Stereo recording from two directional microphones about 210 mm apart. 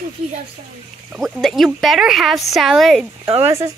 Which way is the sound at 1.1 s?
Centre (ahead or behind).